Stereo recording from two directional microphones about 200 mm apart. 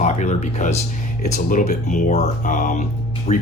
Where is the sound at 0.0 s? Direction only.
35° left (ahead or behind).